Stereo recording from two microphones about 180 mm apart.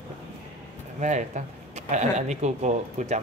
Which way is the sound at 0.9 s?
40° right (ahead or behind).